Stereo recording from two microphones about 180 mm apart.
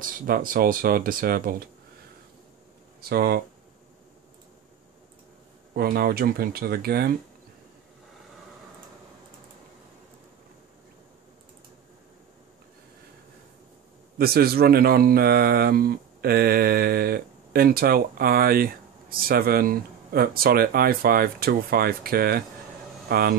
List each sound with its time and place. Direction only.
0.0 s speech: 50° right (ahead or behind)
3.0 s speech: 60° right (ahead or behind)
5.8 s speech: 60° right (ahead or behind)
14.1 s speech: 60° right (ahead or behind)